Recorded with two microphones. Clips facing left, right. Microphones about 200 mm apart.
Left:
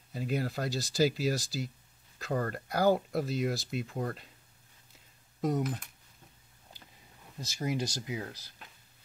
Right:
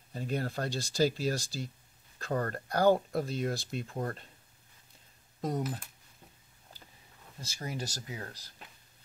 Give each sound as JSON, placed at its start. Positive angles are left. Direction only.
{"t": 0.1, "sound": "speech", "side_deg": 5}
{"t": 5.4, "sound": "speech", "side_deg": -5}
{"t": 7.3, "sound": "speech", "side_deg": 15}